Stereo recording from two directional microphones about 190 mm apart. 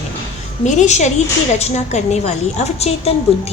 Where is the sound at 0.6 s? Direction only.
35° left (ahead or behind).